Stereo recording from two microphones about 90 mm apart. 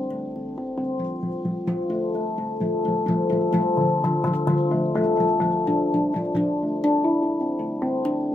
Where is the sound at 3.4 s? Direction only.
20° left (ahead or behind).